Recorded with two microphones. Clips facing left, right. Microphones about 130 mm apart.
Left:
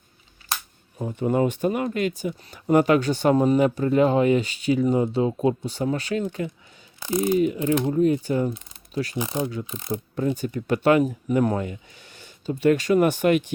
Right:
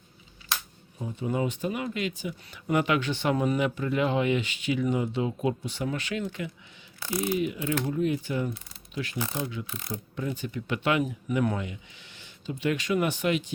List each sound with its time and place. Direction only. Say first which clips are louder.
0.9 s speech: left 7 dB; 55° left (ahead or behind); by 6.2 s 35° left (ahead or behind)
7.0 s speech: left 6 dB; 20° left (ahead or behind)
7.3 s speech: left 7 dB; 40° left (ahead or behind)
7.6 s speech: left 7 dB; 20° left (ahead or behind)
7.9 s speech: left 7 dB; 40° left (ahead or behind)
9.6 s speech: left 7 dB; 20° left (ahead or behind)
10.2 s speech: left 7 dB; 40° left (ahead or behind)